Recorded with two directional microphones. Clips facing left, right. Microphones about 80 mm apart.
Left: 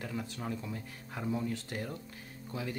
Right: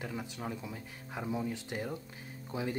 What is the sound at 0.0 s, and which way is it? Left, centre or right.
Speech, centre.